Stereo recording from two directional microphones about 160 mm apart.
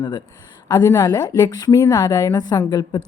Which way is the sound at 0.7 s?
20° left (ahead or behind).